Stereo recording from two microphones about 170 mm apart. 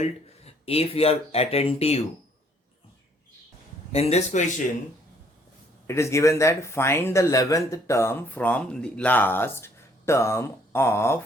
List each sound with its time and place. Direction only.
0.0 s speech: 35° left (ahead or behind)
3.9 s speech: 40° left (ahead or behind)
5.9 s speech: 15° left (ahead or behind)